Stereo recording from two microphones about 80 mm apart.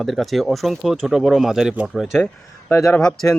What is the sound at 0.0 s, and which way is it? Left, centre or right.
Speech, centre.